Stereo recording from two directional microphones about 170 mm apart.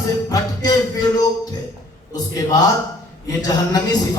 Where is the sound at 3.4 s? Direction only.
20° left (ahead or behind).